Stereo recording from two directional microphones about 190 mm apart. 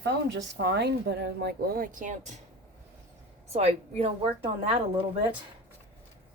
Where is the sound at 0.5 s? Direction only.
60° right (ahead or behind); by 2.3 s 40° right (ahead or behind).